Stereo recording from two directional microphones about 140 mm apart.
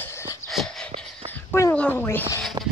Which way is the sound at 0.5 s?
Centre (ahead or behind).